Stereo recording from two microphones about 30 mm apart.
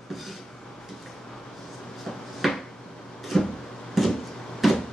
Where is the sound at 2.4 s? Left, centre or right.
Centre.